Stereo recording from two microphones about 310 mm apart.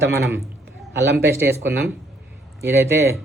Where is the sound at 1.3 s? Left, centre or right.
Centre.